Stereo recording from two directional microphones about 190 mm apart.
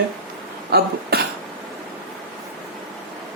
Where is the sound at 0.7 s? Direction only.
55° right (ahead or behind).